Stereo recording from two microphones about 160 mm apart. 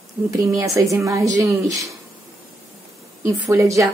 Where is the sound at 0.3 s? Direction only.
20° right (ahead or behind).